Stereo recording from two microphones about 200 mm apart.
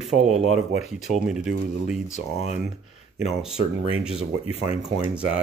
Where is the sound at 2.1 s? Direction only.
35° left (ahead or behind).